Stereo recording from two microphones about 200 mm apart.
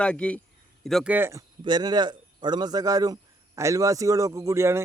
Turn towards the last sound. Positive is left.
turn(degrees=-15)  # may be behind; listen again after turning